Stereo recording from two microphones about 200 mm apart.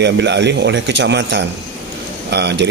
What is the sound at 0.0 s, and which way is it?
Speech, 60° right (ahead or behind).